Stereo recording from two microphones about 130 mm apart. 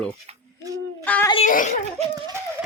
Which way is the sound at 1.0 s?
10° left (ahead or behind).